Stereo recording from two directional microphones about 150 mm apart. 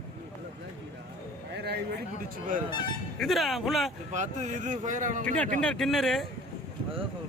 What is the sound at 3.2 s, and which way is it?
Speech, centre (ahead or behind).